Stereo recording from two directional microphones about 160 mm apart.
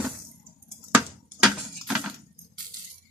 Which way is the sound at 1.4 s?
Centre (ahead or behind).